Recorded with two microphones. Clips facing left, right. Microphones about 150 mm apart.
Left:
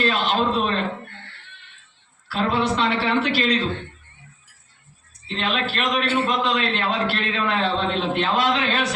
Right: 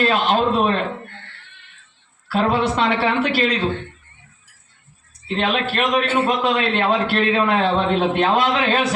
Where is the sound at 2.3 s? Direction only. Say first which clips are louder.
Right 3 dB; 45° right (ahead or behind).